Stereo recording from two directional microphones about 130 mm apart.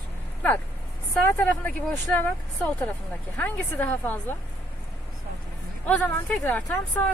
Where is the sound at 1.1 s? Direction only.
10° left (ahead or behind).